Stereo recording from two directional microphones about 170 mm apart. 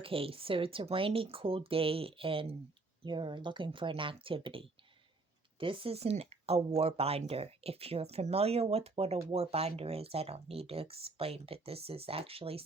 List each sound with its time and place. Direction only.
0.0 s speech: 35° right (ahead or behind)